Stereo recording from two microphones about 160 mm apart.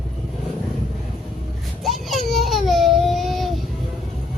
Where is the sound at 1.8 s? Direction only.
Centre (ahead or behind).